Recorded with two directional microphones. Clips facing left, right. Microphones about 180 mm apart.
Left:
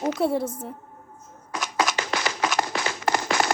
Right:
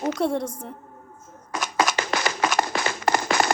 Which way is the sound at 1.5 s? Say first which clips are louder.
Right 2 dB; 50° right (ahead or behind).